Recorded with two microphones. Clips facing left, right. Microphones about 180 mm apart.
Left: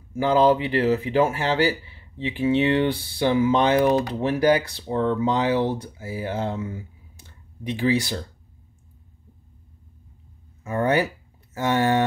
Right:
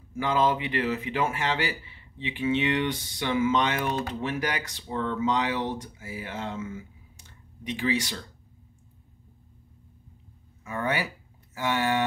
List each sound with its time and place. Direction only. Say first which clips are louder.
0.1 s speech: left 7 dB; 35° left (ahead or behind)
10.6 s speech: left 8 dB; 45° left (ahead or behind)
11.5 s a sound: left 5 dB; 45° left (ahead or behind)